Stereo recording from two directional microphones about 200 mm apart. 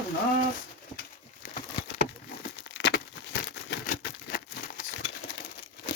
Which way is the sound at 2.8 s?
60° left (ahead or behind).